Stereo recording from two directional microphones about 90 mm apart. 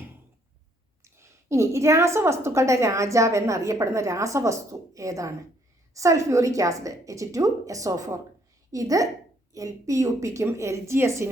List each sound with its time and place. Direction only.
1.0 s a woman's voice: 30° right (ahead or behind)